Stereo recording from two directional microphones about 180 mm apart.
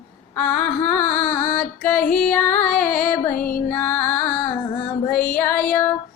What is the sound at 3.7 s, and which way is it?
Female singing, 10° left (ahead or behind).